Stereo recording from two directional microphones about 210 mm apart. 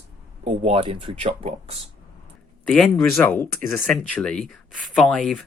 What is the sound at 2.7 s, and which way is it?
Speech, 5° left (ahead or behind).